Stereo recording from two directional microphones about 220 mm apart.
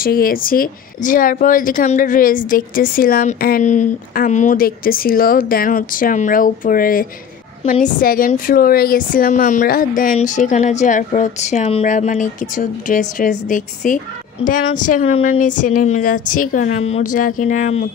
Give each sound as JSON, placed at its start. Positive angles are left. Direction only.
{"t": 0.0, "sound": "a woman's voice", "side_deg": 40}